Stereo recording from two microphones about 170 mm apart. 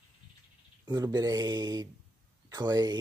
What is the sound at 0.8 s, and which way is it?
Speech, 25° right (ahead or behind).